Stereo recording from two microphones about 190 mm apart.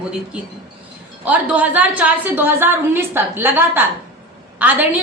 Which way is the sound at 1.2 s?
10° right (ahead or behind).